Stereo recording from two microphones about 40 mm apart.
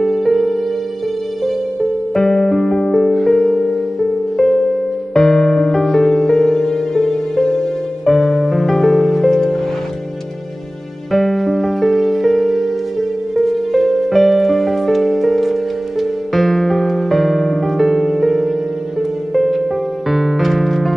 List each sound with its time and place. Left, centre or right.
0.0 s music: centre
2.1 s music: centre
11.1 s music: centre